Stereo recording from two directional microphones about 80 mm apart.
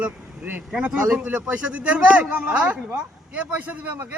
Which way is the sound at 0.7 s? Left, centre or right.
Centre.